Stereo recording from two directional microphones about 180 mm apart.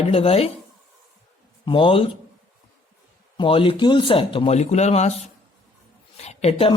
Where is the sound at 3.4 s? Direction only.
30° left (ahead or behind).